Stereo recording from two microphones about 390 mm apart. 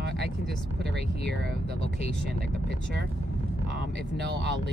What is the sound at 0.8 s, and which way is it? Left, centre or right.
Speech, right.